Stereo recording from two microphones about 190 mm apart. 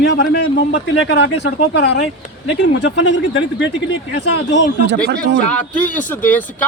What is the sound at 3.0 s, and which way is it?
Speech, 75° left (ahead or behind).